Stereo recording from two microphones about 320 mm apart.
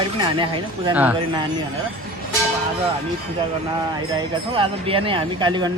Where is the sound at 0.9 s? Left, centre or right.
Centre.